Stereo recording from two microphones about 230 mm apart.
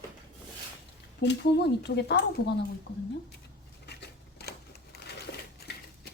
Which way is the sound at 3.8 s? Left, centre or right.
Left.